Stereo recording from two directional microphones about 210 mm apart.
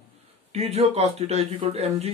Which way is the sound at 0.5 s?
30° right (ahead or behind).